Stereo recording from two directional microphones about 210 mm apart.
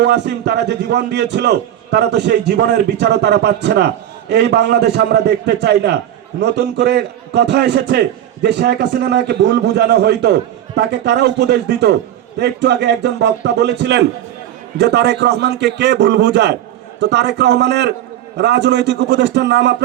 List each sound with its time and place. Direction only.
0.0 s a man's voice: 55° right (ahead or behind)